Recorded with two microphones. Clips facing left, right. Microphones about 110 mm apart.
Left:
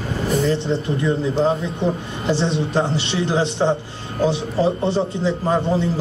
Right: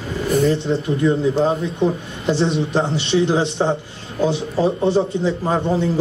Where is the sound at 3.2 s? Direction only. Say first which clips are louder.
Right 3 dB; 15° right (ahead or behind).